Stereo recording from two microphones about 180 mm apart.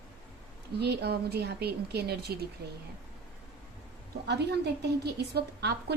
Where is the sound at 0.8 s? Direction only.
65° right (ahead or behind).